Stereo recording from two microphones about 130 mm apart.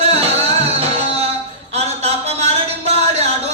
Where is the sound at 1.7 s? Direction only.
55° right (ahead or behind).